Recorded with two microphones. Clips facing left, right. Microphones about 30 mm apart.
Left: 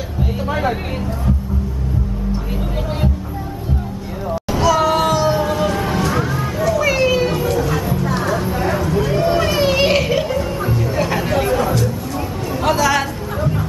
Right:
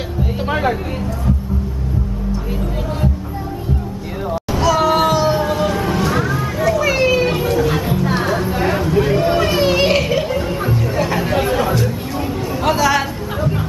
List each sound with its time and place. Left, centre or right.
4.5 s music: centre
7.2 s vehicle: centre
7.7 s music: right
8.0 s a sound: centre
10.3 s music: centre
11.0 s chatter: centre
11.3 s a sound: centre
12.6 s chatter: centre